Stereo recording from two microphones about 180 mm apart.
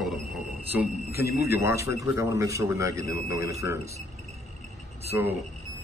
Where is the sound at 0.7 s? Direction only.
10° right (ahead or behind).